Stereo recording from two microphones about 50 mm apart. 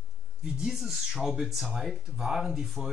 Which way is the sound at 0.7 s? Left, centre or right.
Centre.